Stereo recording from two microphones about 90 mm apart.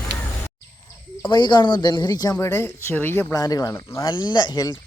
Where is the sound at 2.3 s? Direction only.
30° left (ahead or behind).